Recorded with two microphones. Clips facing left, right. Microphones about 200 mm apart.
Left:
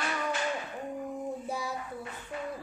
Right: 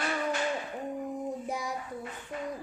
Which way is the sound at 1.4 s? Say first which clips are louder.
Even; 15° right (ahead or behind).